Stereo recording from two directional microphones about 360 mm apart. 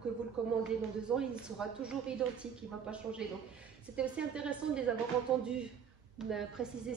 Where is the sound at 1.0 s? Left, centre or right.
Centre.